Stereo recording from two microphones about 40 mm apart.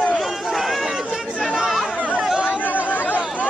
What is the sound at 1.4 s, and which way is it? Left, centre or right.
Chatter, centre.